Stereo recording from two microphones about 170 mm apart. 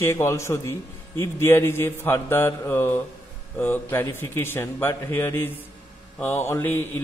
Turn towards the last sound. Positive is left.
turn(degrees=15)  # may be behind; listen again after turning